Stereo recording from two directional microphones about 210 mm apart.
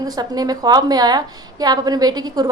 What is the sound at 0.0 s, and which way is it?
A woman's voice, 20° right (ahead or behind).